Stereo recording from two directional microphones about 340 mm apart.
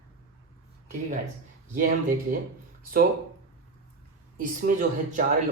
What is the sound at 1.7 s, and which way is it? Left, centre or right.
Speech, right.